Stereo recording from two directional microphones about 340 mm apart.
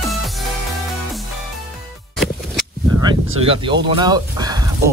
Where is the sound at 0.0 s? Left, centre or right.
Centre.